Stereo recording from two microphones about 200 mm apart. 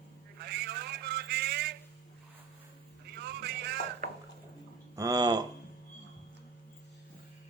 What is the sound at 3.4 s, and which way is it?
Vehicle, 55° right (ahead or behind).